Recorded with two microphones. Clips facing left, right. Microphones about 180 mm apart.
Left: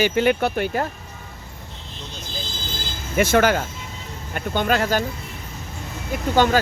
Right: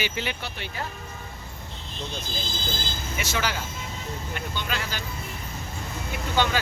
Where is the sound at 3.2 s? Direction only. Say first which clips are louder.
Left 13 dB; 55° left (ahead or behind).